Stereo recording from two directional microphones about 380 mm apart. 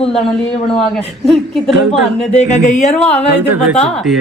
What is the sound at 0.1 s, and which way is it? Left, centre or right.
A woman's voice, centre.